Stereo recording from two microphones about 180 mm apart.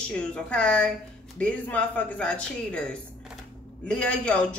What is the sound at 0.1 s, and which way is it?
A woman's voice, 5° left (ahead or behind).